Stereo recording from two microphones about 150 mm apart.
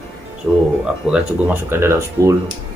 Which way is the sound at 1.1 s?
10° right (ahead or behind).